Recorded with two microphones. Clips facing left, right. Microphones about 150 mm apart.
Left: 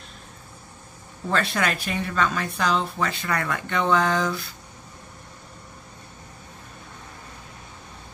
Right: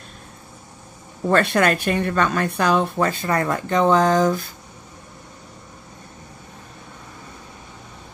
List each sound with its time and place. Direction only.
1.3 s a woman's voice: 55° right (ahead or behind)
3.3 s speech: 35° right (ahead or behind)